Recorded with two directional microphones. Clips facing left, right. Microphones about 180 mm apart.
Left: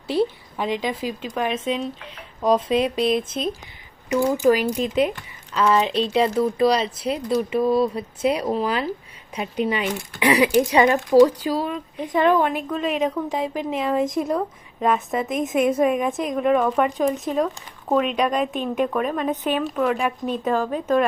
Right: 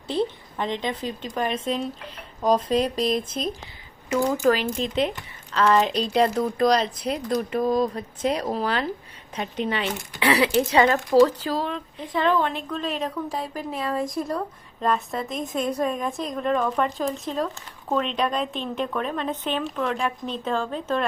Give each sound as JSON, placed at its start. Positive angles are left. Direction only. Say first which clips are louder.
{"t": 0.1, "sound": "speech", "louder": "left 4 dB", "side_deg": 5}
{"t": 13.5, "sound": "speech", "louder": "left 5 dB", "side_deg": 20}
{"t": 14.8, "sound": "speech", "louder": "left 3 dB", "side_deg": 0}
{"t": 15.2, "sound": "speech", "louder": "left 6 dB", "side_deg": 20}
{"t": 16.2, "sound": "speech", "louder": "left 4 dB", "side_deg": 5}